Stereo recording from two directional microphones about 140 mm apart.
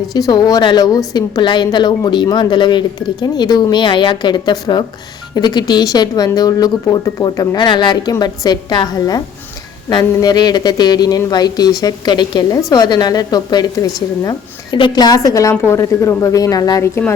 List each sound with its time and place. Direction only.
0.1 s a woman's voice: 30° left (ahead or behind)